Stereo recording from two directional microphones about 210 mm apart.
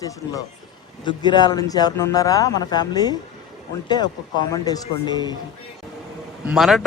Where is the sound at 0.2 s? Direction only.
10° left (ahead or behind).